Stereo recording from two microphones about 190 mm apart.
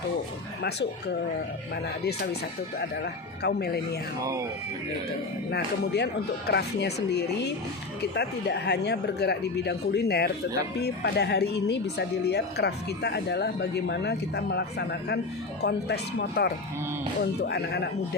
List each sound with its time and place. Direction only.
0.6 s speech: 60° left (ahead or behind)
5.5 s speech: 60° left (ahead or behind)